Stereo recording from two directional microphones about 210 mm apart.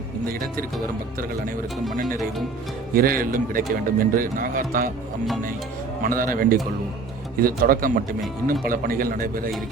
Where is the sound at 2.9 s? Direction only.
45° right (ahead or behind).